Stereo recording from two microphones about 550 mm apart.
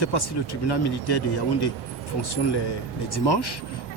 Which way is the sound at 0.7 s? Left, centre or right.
Left.